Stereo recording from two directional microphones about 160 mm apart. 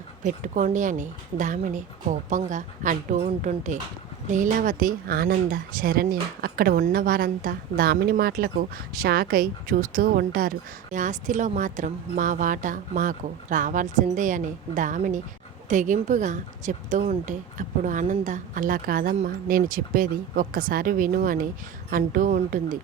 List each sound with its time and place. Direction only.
0.2 s a woman's voice: 55° right (ahead or behind)
10.9 s a woman's voice: 50° right (ahead or behind)